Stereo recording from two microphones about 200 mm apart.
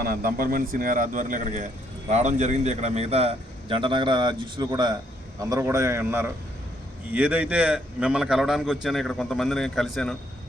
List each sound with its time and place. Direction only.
0.0 s a man's voice: 45° right (ahead or behind); by 10.2 s centre (ahead or behind)